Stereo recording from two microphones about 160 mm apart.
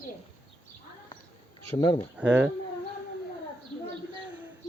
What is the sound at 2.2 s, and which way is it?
Speech, 10° right (ahead or behind).